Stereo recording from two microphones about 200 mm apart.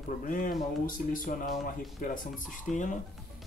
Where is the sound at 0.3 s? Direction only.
45° left (ahead or behind).